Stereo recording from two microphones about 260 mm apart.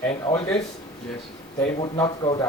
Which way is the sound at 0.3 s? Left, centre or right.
Centre.